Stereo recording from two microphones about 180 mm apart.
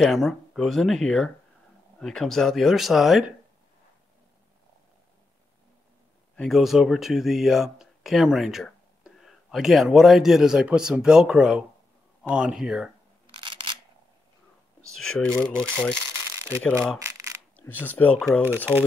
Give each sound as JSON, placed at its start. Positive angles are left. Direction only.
{"t": 0.0, "sound": "speech", "side_deg": 0}
{"t": 6.3, "sound": "speech", "side_deg": 0}
{"t": 13.3, "sound": "single-lens reflex camera", "side_deg": -30}
{"t": 14.9, "sound": "speech", "side_deg": 0}